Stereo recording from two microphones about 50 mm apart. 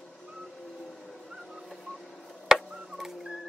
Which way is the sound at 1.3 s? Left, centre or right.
Centre.